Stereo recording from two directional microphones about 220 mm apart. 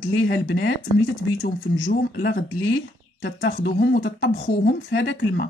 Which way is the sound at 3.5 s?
40° left (ahead or behind).